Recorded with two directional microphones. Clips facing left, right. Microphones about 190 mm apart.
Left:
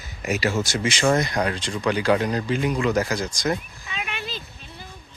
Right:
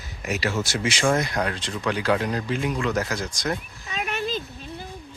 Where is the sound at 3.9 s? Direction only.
40° right (ahead or behind).